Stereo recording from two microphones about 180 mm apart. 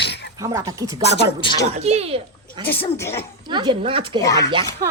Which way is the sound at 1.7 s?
35° right (ahead or behind).